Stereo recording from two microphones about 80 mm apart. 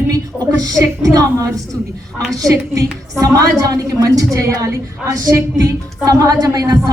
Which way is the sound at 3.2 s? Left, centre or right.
Right.